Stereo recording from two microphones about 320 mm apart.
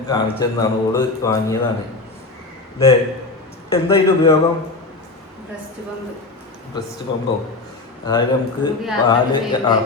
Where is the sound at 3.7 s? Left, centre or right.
Centre.